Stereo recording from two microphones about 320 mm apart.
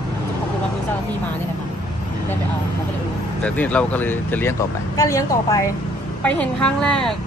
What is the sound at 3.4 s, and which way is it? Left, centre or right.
Speech, centre.